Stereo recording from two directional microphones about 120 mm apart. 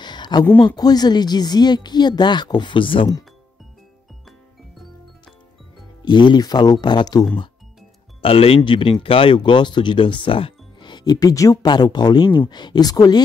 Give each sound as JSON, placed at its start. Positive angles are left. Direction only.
{"t": 0.0, "sound": "a sound", "side_deg": 40}
{"t": 0.6, "sound": "speech", "side_deg": 35}
{"t": 6.0, "sound": "speech", "side_deg": 40}
{"t": 8.2, "sound": "speech", "side_deg": 50}